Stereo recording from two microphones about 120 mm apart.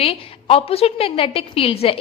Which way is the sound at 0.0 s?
55° left (ahead or behind).